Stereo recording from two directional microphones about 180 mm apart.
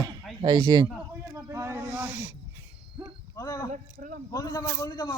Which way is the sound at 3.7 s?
50° right (ahead or behind).